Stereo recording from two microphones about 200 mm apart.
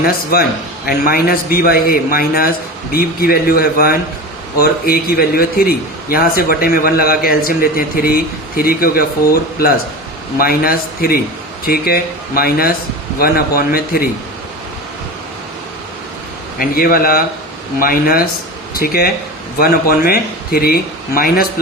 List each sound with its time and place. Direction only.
0.0 s a man's voice: 50° left (ahead or behind)
16.6 s a man's voice: 45° left (ahead or behind)